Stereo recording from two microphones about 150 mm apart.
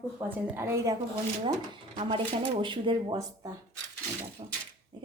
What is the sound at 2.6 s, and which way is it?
Speech, 35° right (ahead or behind).